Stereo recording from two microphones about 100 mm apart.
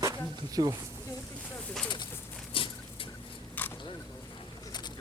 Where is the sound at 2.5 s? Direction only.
60° left (ahead or behind).